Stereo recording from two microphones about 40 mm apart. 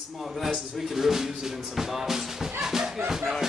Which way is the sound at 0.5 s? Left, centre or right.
Centre.